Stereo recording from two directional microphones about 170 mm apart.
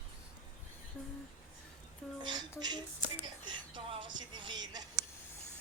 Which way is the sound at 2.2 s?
25° right (ahead or behind).